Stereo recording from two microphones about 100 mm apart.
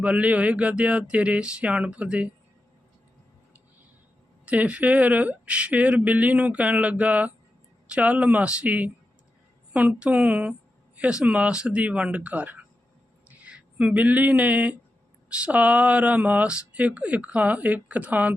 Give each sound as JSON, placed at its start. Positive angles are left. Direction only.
{"t": 0.0, "sound": "speech", "side_deg": -15}
{"t": 4.4, "sound": "speech", "side_deg": -15}